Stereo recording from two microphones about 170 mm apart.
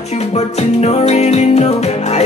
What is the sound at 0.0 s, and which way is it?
Music, 40° left (ahead or behind).